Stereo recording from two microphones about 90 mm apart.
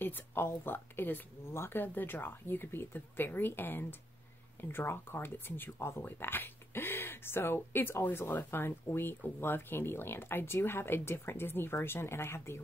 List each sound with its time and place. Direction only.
0.0 s speech: 25° left (ahead or behind)